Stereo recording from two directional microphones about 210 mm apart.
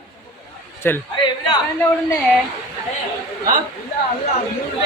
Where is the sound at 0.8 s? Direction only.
10° left (ahead or behind).